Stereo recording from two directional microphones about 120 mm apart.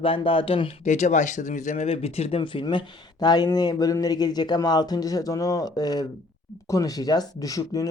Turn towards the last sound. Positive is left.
turn(degrees=30)  # may be behind; listen again after turning